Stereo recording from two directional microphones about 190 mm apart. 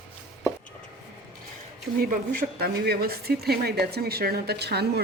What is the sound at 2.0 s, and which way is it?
Speech, 50° right (ahead or behind).